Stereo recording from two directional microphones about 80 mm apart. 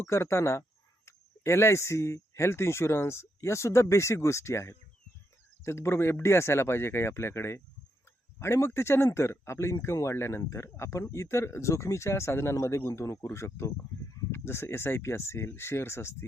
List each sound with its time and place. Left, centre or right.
0.0 s speech: left